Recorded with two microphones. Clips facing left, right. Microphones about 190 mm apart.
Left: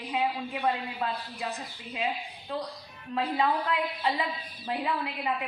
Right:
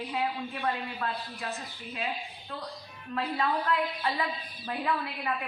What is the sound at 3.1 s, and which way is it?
A woman's voice, 20° left (ahead or behind).